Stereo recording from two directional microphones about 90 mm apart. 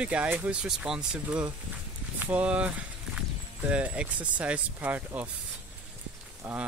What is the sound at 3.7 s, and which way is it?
Speech, 15° right (ahead or behind).